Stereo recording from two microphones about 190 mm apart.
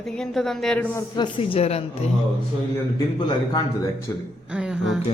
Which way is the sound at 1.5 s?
35° left (ahead or behind).